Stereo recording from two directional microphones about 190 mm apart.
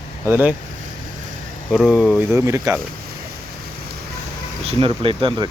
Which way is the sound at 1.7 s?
Centre (ahead or behind).